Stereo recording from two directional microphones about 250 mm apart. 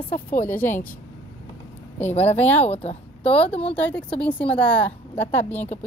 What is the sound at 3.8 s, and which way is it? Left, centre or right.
A woman's voice, centre.